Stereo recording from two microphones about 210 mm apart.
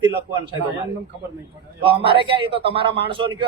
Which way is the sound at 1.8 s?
25° right (ahead or behind).